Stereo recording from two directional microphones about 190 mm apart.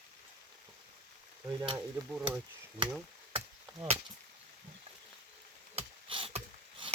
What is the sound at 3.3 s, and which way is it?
Chop, 30° right (ahead or behind).